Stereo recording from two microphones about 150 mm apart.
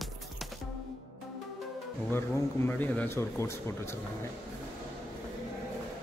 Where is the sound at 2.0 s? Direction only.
15° left (ahead or behind).